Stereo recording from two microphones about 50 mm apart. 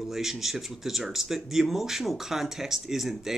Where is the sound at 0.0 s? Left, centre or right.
Centre.